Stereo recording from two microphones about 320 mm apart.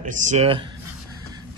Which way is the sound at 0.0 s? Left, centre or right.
Right.